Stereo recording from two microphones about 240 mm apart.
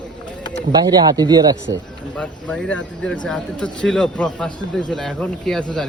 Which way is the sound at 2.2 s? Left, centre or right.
Centre.